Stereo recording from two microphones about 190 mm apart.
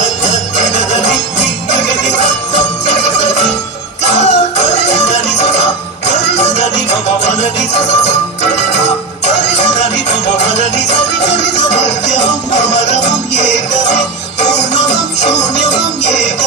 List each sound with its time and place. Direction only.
3.0 s music: 35° left (ahead or behind)
6.3 s music: 35° left (ahead or behind)
7.7 s music: 35° left (ahead or behind)
12.5 s music: 35° left (ahead or behind)